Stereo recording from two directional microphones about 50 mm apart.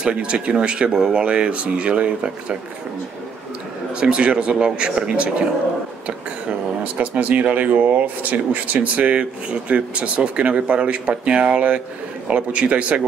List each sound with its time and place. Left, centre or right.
0.0 s speech: centre
3.9 s speech: right
6.8 s speech: right